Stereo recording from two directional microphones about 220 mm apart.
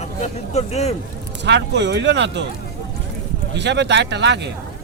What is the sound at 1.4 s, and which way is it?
Speech, 50° right (ahead or behind).